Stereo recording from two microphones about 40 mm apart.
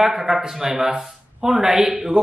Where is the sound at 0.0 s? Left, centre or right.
Centre.